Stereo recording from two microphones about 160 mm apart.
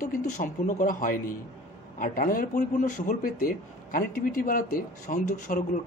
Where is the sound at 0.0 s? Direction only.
60° left (ahead or behind).